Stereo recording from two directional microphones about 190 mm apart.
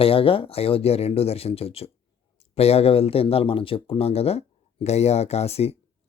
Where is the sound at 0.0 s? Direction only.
30° left (ahead or behind).